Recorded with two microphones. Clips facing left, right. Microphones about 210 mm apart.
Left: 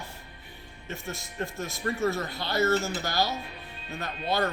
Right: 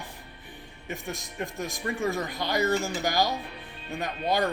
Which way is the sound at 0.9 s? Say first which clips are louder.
Right 2 dB; 15° right (ahead or behind).